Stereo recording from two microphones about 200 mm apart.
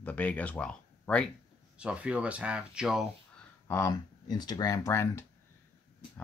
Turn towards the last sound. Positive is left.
turn(degrees=10)  # may be behind; listen again after turning